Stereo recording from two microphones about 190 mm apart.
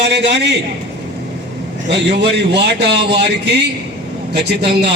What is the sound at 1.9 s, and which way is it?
Speech, 65° right (ahead or behind).